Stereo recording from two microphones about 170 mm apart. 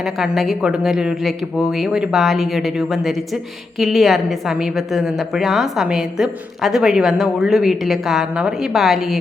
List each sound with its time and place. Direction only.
0.0 s speech: centre (ahead or behind)